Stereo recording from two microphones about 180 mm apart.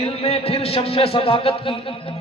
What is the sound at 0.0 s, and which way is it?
A man's voice, 35° left (ahead or behind).